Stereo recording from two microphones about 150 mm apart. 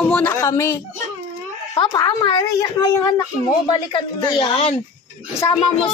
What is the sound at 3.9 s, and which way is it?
Speech, 35° left (ahead or behind).